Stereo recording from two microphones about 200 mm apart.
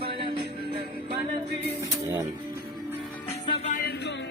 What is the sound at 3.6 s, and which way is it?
Music, 40° left (ahead or behind).